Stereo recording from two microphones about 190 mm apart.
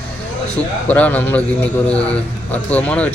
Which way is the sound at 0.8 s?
10° left (ahead or behind).